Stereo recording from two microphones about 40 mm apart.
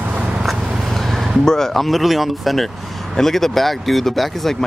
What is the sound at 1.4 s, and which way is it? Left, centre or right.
Speech, centre.